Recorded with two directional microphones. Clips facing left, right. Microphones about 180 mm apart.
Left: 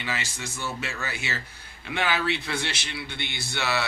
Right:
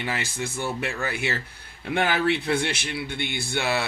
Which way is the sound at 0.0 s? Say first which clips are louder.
Right 4 dB; 55° right (ahead or behind).